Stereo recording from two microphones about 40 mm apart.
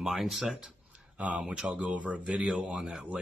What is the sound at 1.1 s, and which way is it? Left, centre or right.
Speech, right.